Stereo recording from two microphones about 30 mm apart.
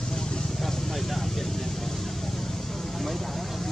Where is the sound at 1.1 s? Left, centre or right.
Centre.